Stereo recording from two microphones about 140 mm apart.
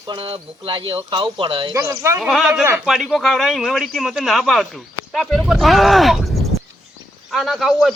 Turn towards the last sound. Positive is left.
turn(degrees=0)  # may be behind; listen again after turning